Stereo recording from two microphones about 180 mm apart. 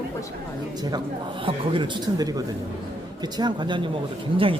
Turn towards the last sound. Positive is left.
turn(degrees=-30)  # may be behind; listen again after turning